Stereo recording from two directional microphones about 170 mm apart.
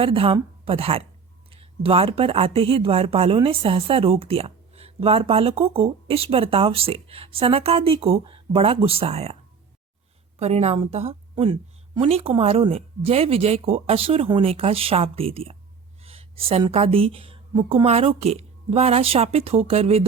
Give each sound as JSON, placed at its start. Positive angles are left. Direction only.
{"t": 0.0, "sound": "speech", "side_deg": -35}